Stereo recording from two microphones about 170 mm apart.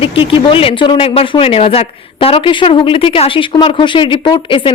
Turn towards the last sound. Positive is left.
turn(degrees=30)  # may be behind; listen again after turning